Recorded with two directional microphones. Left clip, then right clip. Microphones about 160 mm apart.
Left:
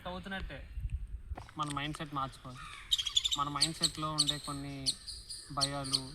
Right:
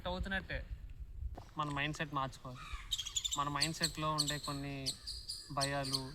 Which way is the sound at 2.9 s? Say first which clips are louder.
Left 8 dB; 90° right.